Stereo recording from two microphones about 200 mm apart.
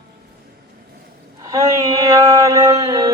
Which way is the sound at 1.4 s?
15° right (ahead or behind).